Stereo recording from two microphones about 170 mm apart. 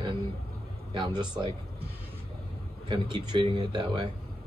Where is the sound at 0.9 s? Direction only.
30° right (ahead or behind).